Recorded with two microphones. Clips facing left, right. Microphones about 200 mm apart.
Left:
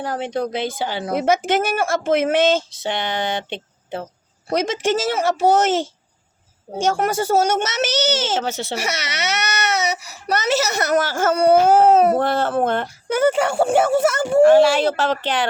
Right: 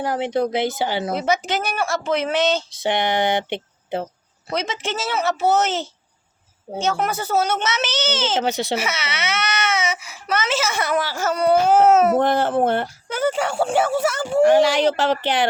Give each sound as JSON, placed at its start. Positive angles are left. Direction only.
{"t": 0.0, "sound": "speech", "side_deg": -10}
{"t": 1.1, "sound": "speech", "side_deg": 50}
{"t": 2.8, "sound": "speech", "side_deg": -15}
{"t": 4.4, "sound": "speech", "side_deg": 45}
{"t": 8.4, "sound": "speech", "side_deg": -15}
{"t": 8.8, "sound": "speech", "side_deg": 45}
{"t": 12.2, "sound": "speech", "side_deg": -15}
{"t": 13.3, "sound": "speech", "side_deg": 45}
{"t": 14.4, "sound": "speech", "side_deg": -15}